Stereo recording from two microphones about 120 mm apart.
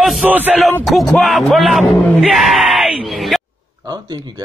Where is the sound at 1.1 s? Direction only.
Centre (ahead or behind).